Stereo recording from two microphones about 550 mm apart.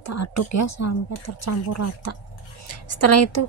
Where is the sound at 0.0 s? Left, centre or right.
Left.